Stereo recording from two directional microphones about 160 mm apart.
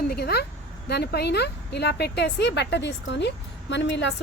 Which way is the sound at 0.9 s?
90° left.